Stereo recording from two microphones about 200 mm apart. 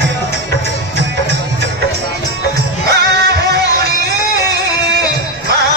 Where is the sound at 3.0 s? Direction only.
55° right (ahead or behind).